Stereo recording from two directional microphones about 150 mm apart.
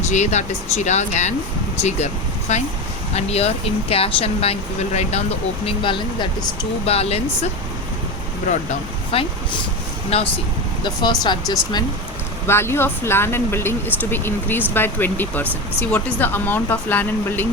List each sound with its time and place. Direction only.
0.1 s speech: 50° left (ahead or behind)
5.6 s speech: 35° left (ahead or behind)
9.1 s speech: 40° left (ahead or behind)
10.8 s speech: 30° left (ahead or behind)
12.5 s speech: 15° left (ahead or behind)